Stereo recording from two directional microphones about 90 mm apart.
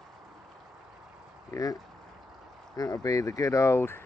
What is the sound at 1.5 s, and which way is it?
Speech, 40° left (ahead or behind).